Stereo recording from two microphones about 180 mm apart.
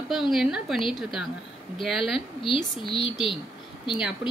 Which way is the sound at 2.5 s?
30° left (ahead or behind).